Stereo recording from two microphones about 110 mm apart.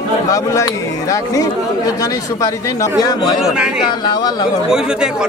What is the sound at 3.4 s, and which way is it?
Speech, 10° right (ahead or behind).